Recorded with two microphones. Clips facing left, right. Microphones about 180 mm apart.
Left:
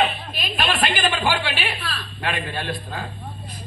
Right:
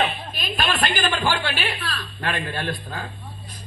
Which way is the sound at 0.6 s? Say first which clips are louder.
Left 1 dB; 45° right (ahead or behind).